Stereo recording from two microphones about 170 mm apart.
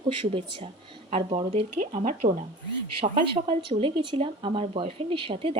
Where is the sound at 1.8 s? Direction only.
50° right (ahead or behind).